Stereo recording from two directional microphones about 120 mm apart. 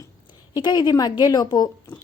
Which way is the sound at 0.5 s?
35° left (ahead or behind).